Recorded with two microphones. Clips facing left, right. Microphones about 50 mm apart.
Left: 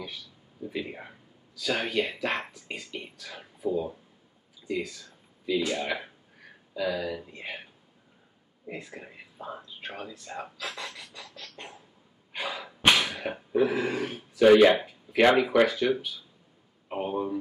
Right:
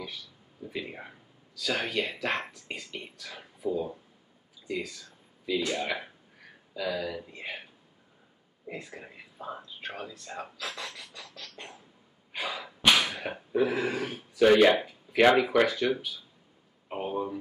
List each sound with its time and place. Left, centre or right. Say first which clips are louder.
0.7 s speech: left 2 dB; centre
8.6 s speech: left 1 dB; centre
11.0 s a sound: left 1 dB; centre
12.3 s sneeze: even; centre
12.9 s speech: even; centre